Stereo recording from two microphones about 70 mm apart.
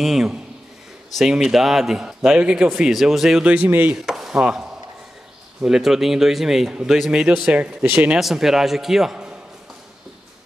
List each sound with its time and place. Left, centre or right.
0.0 s a man's voice: centre
3.4 s speech: right
4.0 s chopping: centre
5.7 s a man's voice: centre
7.9 s speech: right
8.2 s a man's voice: centre